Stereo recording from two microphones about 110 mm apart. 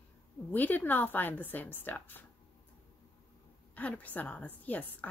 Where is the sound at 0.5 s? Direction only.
15° left (ahead or behind).